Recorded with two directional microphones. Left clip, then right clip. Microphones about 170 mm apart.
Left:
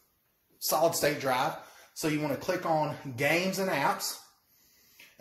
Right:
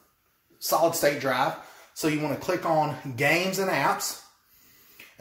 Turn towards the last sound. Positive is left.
turn(degrees=-5)  # may be behind; listen again after turning